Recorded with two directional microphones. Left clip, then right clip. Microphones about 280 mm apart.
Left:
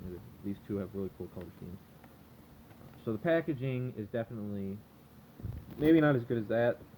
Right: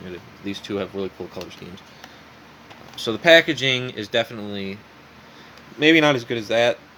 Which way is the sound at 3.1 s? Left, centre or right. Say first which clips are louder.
Right 17 dB; right.